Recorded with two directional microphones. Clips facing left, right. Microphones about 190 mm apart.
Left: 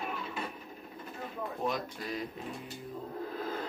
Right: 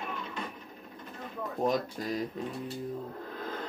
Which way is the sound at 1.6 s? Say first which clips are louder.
Right 7 dB; 40° right (ahead or behind).